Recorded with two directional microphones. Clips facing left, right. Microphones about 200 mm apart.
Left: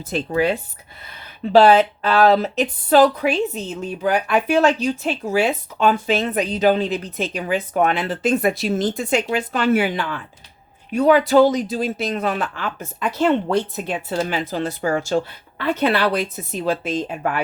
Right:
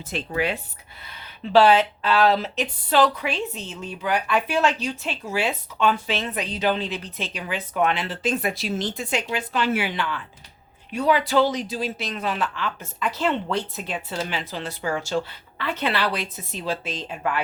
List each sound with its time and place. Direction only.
0.1 s speech: 40° left (ahead or behind)